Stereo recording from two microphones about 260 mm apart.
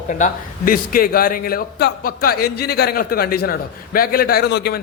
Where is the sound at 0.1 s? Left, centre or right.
Left.